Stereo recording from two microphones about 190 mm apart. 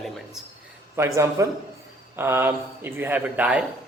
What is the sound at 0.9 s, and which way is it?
A man's voice, 15° right (ahead or behind).